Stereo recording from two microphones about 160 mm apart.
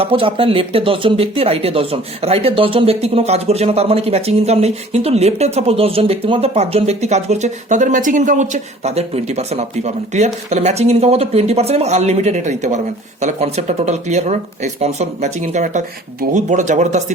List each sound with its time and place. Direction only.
0.0 s speech: 35° right (ahead or behind)